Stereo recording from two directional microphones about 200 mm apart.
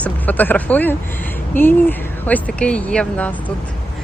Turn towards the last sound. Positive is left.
turn(degrees=5)  # may be behind; listen again after turning